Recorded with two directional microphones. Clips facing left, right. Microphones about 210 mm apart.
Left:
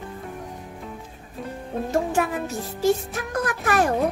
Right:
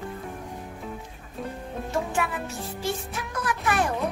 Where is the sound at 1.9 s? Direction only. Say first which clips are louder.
Left 5 dB; 40° left (ahead or behind).